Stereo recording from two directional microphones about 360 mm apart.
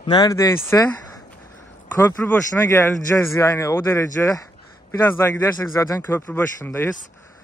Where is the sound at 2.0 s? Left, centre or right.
Centre.